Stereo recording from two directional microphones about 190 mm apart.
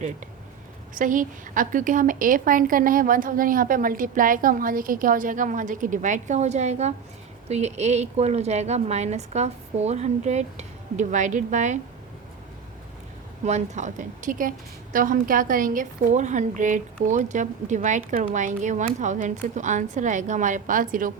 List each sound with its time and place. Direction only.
0.9 s a woman's voice: 45° right (ahead or behind)
13.4 s a woman's voice: 40° right (ahead or behind)